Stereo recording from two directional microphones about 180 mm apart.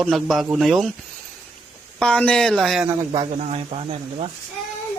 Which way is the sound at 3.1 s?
35° right (ahead or behind).